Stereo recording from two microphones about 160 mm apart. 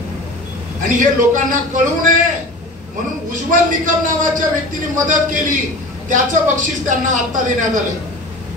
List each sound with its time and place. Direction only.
0.8 s a man's voice: 55° right (ahead or behind)
3.3 s a man's voice: 55° right (ahead or behind)